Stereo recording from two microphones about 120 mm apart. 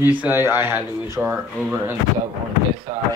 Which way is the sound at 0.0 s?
15° right (ahead or behind).